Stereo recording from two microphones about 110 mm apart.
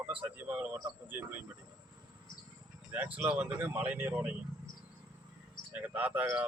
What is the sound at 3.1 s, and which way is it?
Speech, 10° right (ahead or behind).